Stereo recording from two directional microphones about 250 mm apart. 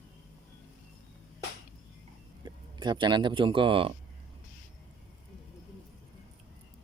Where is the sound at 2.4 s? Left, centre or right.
Centre.